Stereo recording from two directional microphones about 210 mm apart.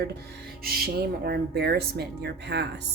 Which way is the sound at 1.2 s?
50° right (ahead or behind).